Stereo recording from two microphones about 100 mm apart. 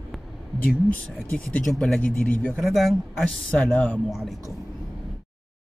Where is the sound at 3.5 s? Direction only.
10° left (ahead or behind).